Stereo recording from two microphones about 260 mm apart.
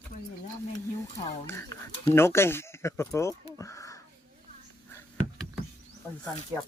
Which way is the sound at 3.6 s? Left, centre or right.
Centre.